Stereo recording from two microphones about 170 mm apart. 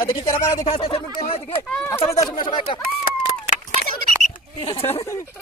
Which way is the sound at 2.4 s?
30° left (ahead or behind).